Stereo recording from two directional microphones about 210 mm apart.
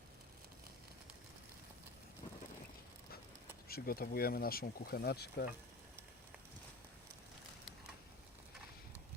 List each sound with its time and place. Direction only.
3.7 s speech: 45° left (ahead or behind)